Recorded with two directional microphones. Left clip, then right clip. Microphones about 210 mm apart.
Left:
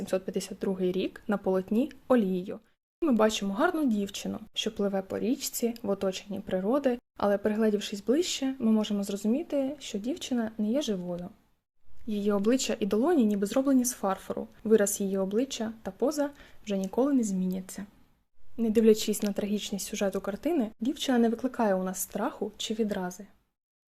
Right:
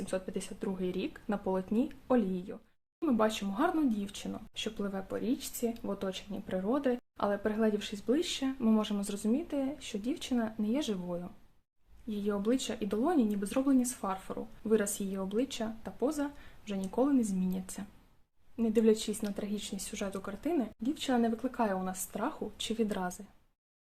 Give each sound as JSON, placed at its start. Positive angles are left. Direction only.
{"t": 0.0, "sound": "speech", "side_deg": 30}
{"t": 12.0, "sound": "speech", "side_deg": 30}